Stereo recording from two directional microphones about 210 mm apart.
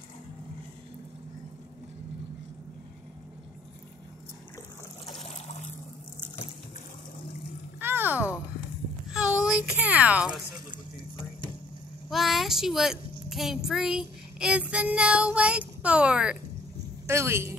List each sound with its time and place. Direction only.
5.0 s trickle: 35° left (ahead or behind)
7.8 s a sound: 10° right (ahead or behind)
9.1 s a child's voice: 5° right (ahead or behind)
12.1 s child singing: centre (ahead or behind)
17.0 s a woman's voice: 10° right (ahead or behind)